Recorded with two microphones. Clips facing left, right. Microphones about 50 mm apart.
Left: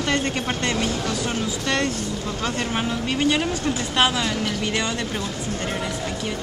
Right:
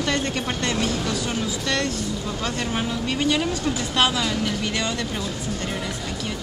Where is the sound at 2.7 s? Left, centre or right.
Centre.